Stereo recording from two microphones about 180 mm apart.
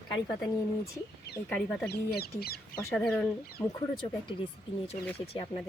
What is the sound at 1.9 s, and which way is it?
Speech, 60° left (ahead or behind).